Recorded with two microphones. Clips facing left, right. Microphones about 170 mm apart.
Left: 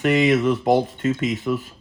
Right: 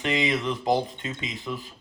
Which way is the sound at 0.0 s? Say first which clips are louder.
Left 8 dB; 50° left (ahead or behind).